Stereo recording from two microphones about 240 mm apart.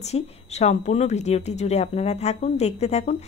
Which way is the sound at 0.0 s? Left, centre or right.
Left.